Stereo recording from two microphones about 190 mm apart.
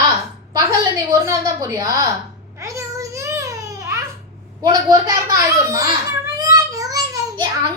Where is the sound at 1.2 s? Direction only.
15° right (ahead or behind).